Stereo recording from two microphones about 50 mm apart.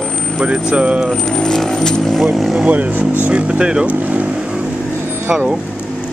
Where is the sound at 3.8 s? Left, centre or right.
Right.